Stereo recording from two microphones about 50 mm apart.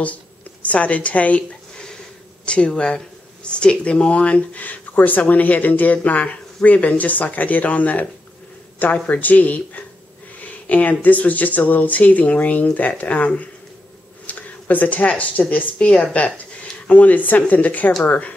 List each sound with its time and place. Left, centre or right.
0.0 s speech: left
2.4 s speech: left